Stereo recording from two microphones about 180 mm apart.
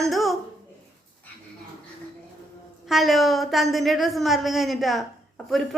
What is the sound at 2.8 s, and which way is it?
A woman's voice, centre (ahead or behind).